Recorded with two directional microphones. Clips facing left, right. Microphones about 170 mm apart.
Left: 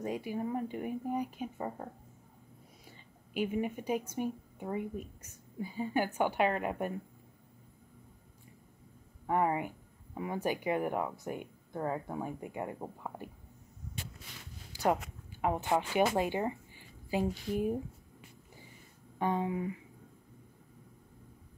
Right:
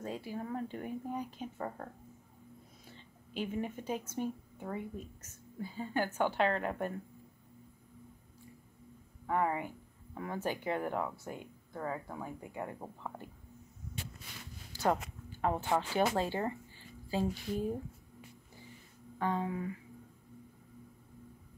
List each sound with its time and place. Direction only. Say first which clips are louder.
0.0 s speech: left 5 dB; 15° left (ahead or behind)
3.3 s speech: left 4 dB; 10° left (ahead or behind)
9.2 s speech: left 2 dB; 20° left (ahead or behind)
14.7 s speech: left 1 dB; 10° left (ahead or behind)
19.1 s speech: left 2 dB; 20° left (ahead or behind)